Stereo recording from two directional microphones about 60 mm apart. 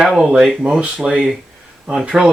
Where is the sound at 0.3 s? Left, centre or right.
Centre.